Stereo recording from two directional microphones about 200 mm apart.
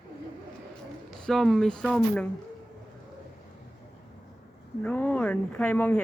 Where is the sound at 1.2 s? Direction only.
Centre (ahead or behind).